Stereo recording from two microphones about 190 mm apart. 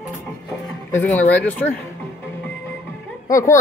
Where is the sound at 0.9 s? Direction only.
10° left (ahead or behind).